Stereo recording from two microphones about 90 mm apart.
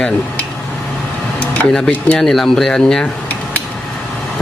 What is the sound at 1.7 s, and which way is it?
Speech, 5° left (ahead or behind).